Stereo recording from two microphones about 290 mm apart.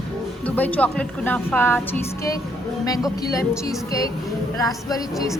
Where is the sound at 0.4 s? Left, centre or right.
Centre.